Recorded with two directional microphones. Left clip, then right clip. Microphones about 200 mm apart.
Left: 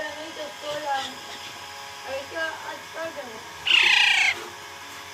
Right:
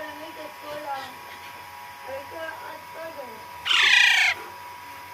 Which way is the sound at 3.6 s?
20° right (ahead or behind).